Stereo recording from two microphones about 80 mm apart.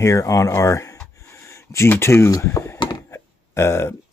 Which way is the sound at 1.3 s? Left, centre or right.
Left.